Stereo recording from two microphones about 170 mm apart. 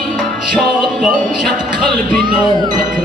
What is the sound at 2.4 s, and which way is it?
Ding, 25° right (ahead or behind).